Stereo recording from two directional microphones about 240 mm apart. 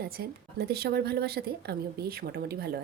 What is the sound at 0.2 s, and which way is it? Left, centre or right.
Speech, right.